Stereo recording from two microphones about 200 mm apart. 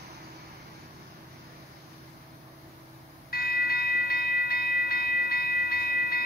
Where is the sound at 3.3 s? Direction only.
50° left (ahead or behind).